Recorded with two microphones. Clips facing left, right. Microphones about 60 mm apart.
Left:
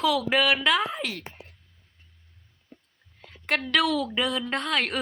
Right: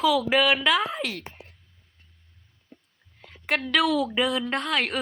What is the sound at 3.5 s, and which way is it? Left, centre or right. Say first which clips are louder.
Speech: right 1 dB; centre.